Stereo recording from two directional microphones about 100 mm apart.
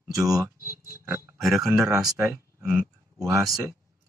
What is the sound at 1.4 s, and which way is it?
Speech, 5° right (ahead or behind).